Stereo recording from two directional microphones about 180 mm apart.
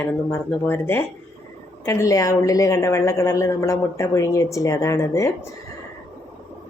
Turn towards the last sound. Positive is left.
turn(degrees=15)  # may be behind; listen again after turning